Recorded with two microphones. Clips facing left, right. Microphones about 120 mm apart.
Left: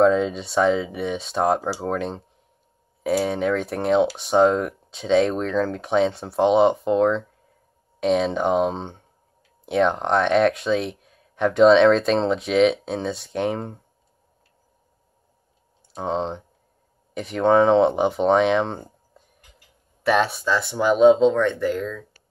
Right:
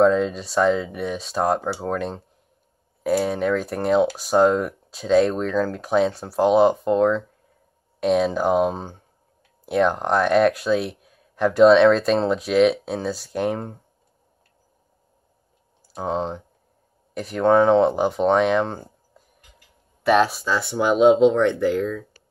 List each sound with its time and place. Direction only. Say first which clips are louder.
0.0 s speech: even; centre (ahead or behind)
15.9 s speech: even; 5° right (ahead or behind)